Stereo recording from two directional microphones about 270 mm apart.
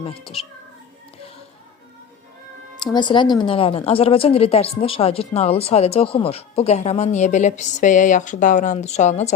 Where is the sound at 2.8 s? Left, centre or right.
Centre.